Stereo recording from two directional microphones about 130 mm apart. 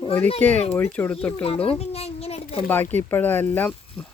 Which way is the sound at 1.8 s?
55° left (ahead or behind).